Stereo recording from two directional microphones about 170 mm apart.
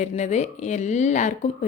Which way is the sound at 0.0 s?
40° left (ahead or behind).